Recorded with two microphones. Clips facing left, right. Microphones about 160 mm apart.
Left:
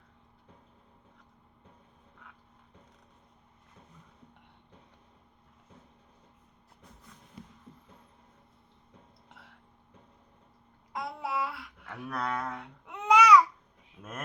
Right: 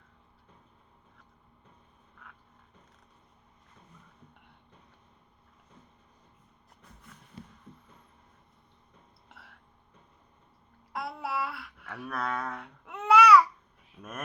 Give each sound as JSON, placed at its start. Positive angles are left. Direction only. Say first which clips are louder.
{"t": 9.3, "sound": "a sound", "louder": "right 1 dB", "side_deg": 20}
{"t": 10.9, "sound": "child singing", "louder": "even", "side_deg": 20}
{"t": 11.3, "sound": "babbling", "louder": "even", "side_deg": 20}
{"t": 14.0, "sound": "speech", "louder": "right 1 dB", "side_deg": 20}